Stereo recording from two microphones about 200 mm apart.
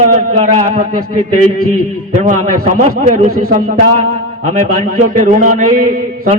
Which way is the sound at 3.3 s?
90° right.